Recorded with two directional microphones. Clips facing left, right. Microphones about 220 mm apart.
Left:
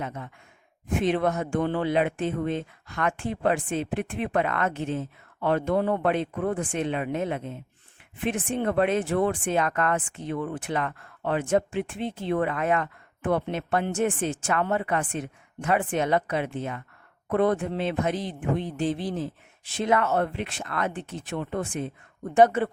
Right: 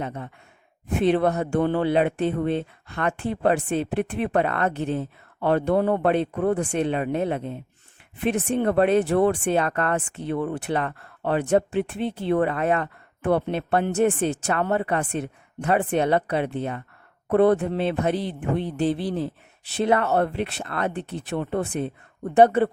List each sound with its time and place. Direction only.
0.0 s speech: 35° right (ahead or behind)
5.7 s speech: 55° right (ahead or behind)
6.0 s speech: 35° right (ahead or behind)
19.1 s speech: 65° right (ahead or behind)
19.7 s speech: 35° right (ahead or behind)